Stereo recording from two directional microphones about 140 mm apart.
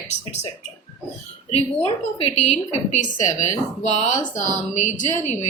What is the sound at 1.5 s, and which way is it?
A woman's voice, 45° left (ahead or behind).